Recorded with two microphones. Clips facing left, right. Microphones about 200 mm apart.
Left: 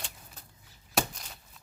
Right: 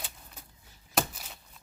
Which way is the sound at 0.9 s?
5° right (ahead or behind).